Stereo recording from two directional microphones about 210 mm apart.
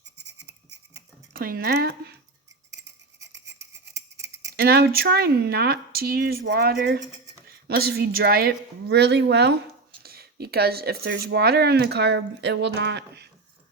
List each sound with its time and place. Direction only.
0.9 s cutlery: 45° right (ahead or behind)
3.2 s a sound: 15° right (ahead or behind)
4.5 s speech: 50° right (ahead or behind)